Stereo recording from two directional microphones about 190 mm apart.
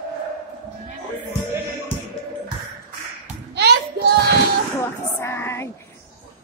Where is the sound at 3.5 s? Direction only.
65° right (ahead or behind).